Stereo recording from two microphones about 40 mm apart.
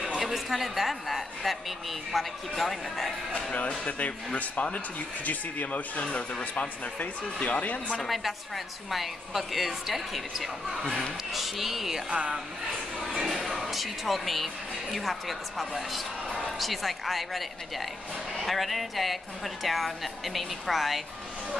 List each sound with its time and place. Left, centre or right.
0.2 s a woman's voice: centre
3.8 s speech: left
6.0 s speech: left
8.1 s a woman's voice: centre
12.1 s speech: right
13.4 s a woman's voice: centre